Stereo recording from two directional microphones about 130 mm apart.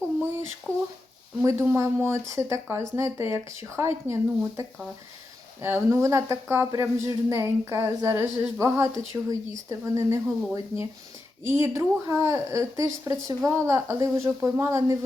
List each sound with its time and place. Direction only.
0.7 s a sound: 10° right (ahead or behind)
1.5 s speech: 20° right (ahead or behind)
5.6 s speech: 20° right (ahead or behind)